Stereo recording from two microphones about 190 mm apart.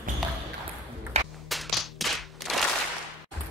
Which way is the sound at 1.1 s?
35° right (ahead or behind).